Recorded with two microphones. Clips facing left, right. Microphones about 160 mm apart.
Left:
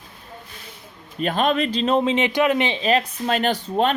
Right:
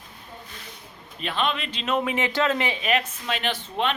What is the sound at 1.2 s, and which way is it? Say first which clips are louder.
Speech: left 7 dB; 45° left (ahead or behind).